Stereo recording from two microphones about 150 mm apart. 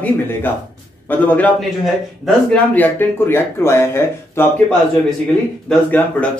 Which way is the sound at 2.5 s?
10° left (ahead or behind).